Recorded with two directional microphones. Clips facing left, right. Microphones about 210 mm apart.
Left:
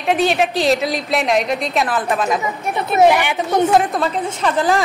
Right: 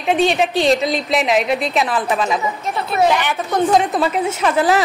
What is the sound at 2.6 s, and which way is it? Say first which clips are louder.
A woman's voice: left 6 dB; 20° left (ahead or behind).